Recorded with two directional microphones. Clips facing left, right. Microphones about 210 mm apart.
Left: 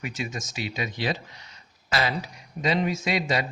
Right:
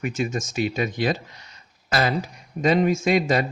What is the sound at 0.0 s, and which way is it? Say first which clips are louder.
Speech: right 7 dB; 50° right (ahead or behind).